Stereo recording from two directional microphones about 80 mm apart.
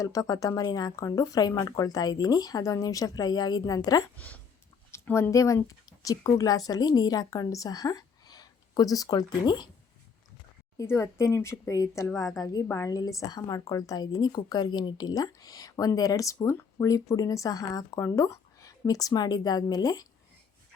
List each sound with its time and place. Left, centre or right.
0.0 s speech: left
4.9 s a sound: left
5.3 s a woman's voice: left
10.8 s a woman's voice: left
13.0 s speech: left